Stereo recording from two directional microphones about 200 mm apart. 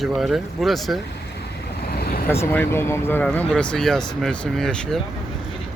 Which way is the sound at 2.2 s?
10° left (ahead or behind).